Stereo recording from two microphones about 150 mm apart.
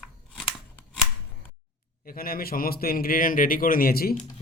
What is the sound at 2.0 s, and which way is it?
A man's voice, 75° left (ahead or behind).